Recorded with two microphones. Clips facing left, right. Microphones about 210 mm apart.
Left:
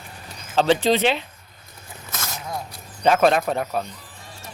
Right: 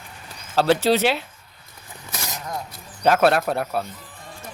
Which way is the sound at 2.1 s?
15° right (ahead or behind).